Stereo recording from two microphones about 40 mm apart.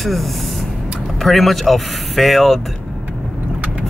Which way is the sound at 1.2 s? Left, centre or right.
Centre.